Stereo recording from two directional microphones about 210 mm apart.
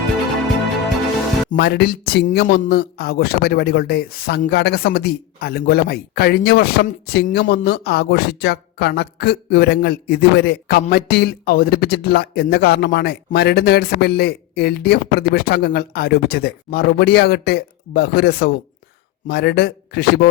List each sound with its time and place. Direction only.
1.5 s a man's voice: 50° left (ahead or behind)